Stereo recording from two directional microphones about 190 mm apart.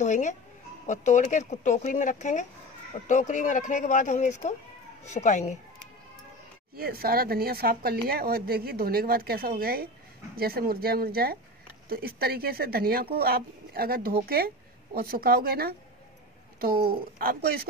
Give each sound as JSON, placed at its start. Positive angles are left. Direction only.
{"t": 0.0, "sound": "speech", "side_deg": 40}
{"t": 6.8, "sound": "a woman's voice", "side_deg": -50}